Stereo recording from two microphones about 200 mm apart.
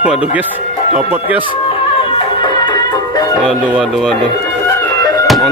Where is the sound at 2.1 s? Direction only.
20° left (ahead or behind).